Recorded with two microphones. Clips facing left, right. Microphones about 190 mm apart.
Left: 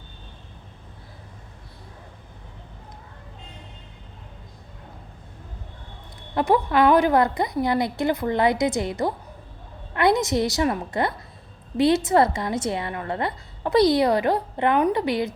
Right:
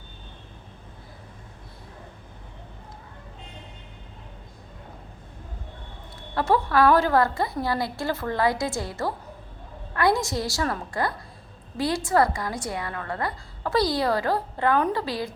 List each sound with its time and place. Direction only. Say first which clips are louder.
6.3 s a woman's voice: left 2 dB; 20° left (ahead or behind)